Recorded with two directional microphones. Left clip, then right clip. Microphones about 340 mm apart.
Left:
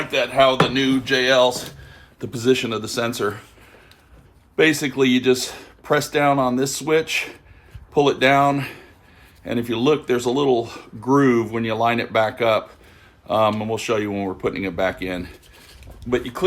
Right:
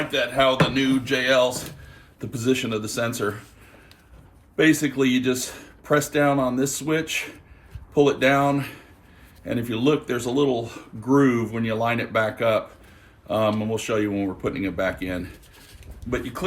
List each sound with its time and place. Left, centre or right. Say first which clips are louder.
0.1 s speech: left 5 dB; left
0.5 s a sound: left 3 dB; centre
4.5 s speech: left 2 dB; centre